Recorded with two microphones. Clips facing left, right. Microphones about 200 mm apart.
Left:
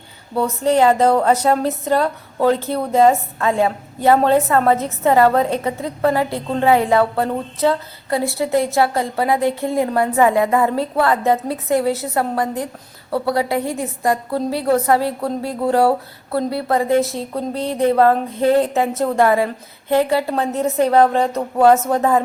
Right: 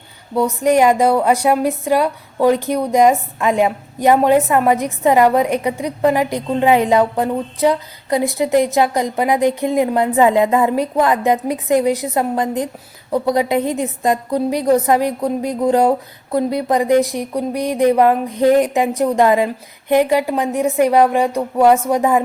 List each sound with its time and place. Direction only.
0.3 s a woman's voice: 15° right (ahead or behind)